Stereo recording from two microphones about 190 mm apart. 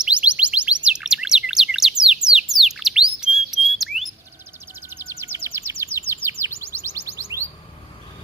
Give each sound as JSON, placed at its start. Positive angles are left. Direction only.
{"t": 0.0, "sound": "music", "side_deg": -5}
{"t": 0.9, "sound": "bird", "side_deg": -5}
{"t": 4.7, "sound": "music", "side_deg": -10}
{"t": 5.2, "sound": "a sound", "side_deg": -15}
{"t": 5.8, "sound": "bird", "side_deg": -10}
{"t": 6.2, "sound": "chirp", "side_deg": -15}